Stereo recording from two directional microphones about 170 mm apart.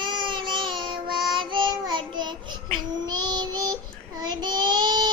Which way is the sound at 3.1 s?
25° right (ahead or behind).